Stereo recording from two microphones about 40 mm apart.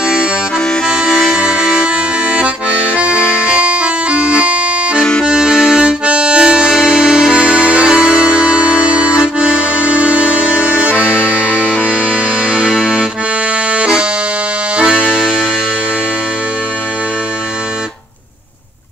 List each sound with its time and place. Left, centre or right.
0.8 s accordion: centre
3.5 s accordion: right
5.2 s accordion: centre
5.5 s accordion: centre
5.8 s harmonica: right
6.9 s music: centre
8.8 s accordion: right
9.9 s music: left
11.4 s music: left
15.1 s music: centre